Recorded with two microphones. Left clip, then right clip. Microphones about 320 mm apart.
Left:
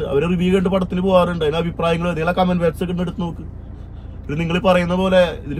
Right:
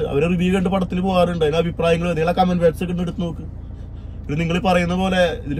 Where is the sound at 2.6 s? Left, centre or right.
Centre.